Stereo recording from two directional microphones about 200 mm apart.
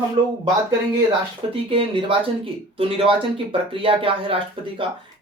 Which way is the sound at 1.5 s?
25° right (ahead or behind).